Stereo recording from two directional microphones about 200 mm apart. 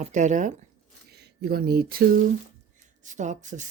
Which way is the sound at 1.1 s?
55° right (ahead or behind).